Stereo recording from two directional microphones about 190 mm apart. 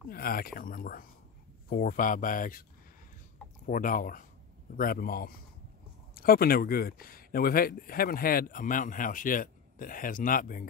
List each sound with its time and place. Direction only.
0.1 s speech: 50° left (ahead or behind)
3.6 s speech: 45° left (ahead or behind)